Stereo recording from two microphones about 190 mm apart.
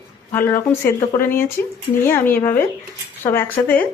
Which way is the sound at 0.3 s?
10° left (ahead or behind).